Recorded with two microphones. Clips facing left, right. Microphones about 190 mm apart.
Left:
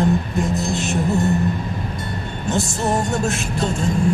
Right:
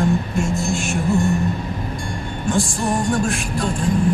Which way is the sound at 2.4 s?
25° left (ahead or behind).